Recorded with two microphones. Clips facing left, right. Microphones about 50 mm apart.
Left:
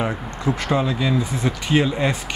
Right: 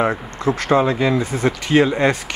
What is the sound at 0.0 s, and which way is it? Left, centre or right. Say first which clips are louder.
Speech: right 4 dB; right.